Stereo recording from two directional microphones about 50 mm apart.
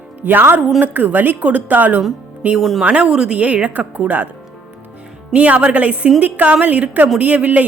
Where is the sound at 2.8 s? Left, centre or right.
Right.